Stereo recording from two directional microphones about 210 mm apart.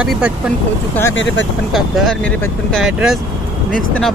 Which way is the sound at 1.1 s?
60° left (ahead or behind).